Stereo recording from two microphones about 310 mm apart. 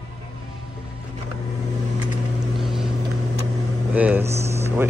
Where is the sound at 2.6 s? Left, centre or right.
Centre.